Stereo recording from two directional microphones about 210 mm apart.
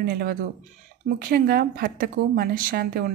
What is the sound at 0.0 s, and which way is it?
A woman's voice, 45° right (ahead or behind).